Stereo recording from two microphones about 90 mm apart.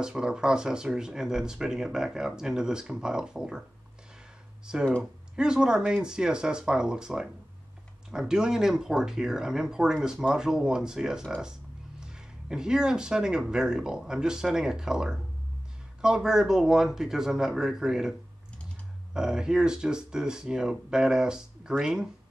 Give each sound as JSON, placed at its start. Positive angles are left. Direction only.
{"t": 0.0, "sound": "speech", "side_deg": -10}
{"t": 4.7, "sound": "speech", "side_deg": -10}
{"t": 19.1, "sound": "speech", "side_deg": -5}